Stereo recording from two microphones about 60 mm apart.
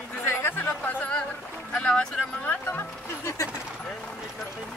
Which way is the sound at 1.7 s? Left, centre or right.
Centre.